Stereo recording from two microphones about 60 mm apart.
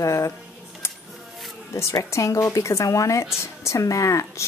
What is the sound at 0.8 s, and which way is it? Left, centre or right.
Music, left.